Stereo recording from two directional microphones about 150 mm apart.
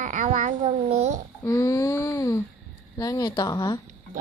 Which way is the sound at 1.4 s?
20° left (ahead or behind).